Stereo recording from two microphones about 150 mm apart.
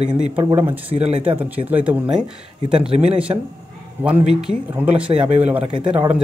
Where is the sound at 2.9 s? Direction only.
40° right (ahead or behind).